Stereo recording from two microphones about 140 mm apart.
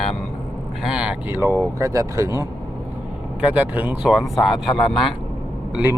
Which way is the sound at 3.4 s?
10° right (ahead or behind).